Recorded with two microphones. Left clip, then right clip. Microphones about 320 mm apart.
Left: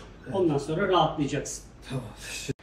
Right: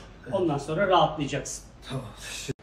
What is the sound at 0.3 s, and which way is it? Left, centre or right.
A man's voice, centre.